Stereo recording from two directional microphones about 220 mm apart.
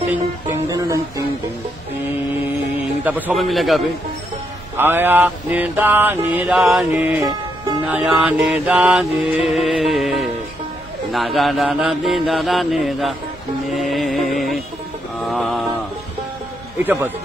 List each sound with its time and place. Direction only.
0.1 s music: 15° right (ahead or behind)
3.0 s mantra: 10° right (ahead or behind)
13.7 s music: centre (ahead or behind)
15.2 s a sound: centre (ahead or behind)
16.7 s a man's voice: 10° right (ahead or behind)